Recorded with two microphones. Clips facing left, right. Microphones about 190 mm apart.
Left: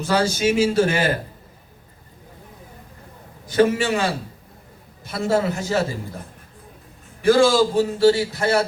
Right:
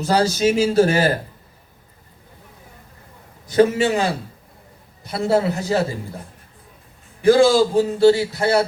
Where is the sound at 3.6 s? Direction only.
35° right (ahead or behind).